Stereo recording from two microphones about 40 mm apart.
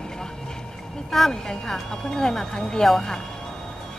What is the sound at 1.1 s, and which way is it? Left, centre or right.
Speech, centre.